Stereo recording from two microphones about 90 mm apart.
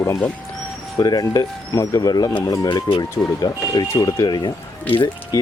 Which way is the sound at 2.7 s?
65° left (ahead or behind).